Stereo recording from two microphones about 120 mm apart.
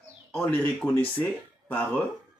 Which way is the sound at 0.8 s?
Centre (ahead or behind).